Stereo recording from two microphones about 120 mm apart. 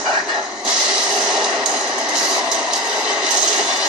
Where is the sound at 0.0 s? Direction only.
5° right (ahead or behind).